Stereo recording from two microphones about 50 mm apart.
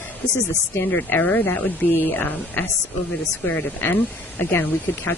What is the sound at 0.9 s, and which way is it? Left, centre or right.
Speech, left.